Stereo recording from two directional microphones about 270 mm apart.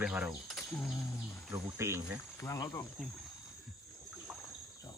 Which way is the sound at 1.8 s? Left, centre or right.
Centre.